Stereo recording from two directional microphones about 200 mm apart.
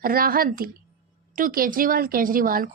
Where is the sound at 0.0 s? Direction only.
45° right (ahead or behind).